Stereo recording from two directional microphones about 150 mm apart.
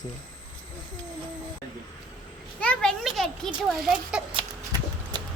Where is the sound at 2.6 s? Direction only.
5° left (ahead or behind).